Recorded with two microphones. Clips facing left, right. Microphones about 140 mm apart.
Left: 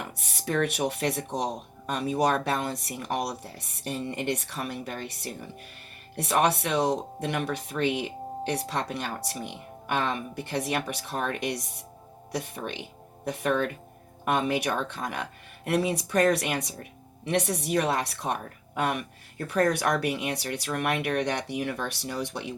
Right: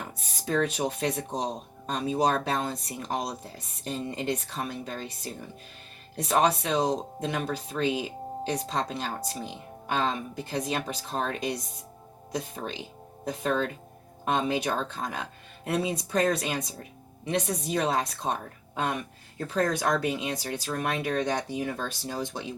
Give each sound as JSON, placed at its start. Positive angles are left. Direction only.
{"t": 0.0, "sound": "speech", "side_deg": 70}
{"t": 19.5, "sound": "speech", "side_deg": 70}